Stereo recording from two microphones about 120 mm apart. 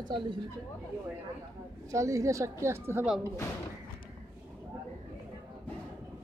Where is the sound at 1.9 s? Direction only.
25° right (ahead or behind).